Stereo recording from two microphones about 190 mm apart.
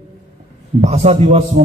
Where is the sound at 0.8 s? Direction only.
35° right (ahead or behind).